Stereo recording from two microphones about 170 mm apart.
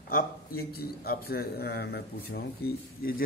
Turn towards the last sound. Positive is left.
turn(degrees=65)  # may be behind; listen again after turning